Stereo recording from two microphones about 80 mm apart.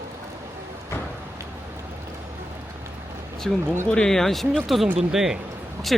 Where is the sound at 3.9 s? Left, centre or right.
Centre.